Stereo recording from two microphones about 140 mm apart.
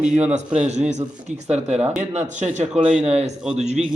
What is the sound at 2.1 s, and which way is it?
Speech, 55° right (ahead or behind).